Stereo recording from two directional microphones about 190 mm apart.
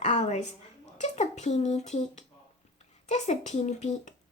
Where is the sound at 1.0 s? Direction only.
35° left (ahead or behind).